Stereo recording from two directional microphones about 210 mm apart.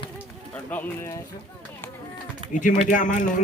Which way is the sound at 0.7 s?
10° left (ahead or behind).